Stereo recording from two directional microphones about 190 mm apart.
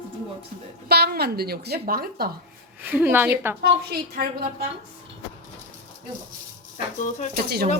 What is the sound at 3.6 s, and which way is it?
Speech, 55° right (ahead or behind).